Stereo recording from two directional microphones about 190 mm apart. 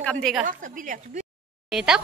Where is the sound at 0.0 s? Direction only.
5° left (ahead or behind).